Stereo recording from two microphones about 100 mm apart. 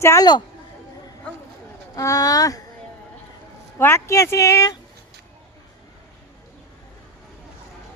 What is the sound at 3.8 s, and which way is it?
Speech, 25° left (ahead or behind).